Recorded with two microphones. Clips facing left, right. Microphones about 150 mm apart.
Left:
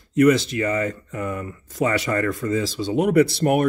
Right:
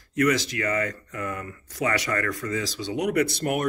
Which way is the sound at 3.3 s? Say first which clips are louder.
Left 7 dB; 40° left (ahead or behind).